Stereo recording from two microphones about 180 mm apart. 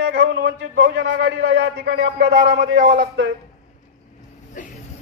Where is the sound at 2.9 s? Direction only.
75° right (ahead or behind).